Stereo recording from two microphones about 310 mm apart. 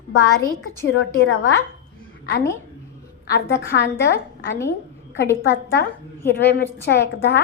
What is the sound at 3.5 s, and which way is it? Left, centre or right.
A woman's voice, left.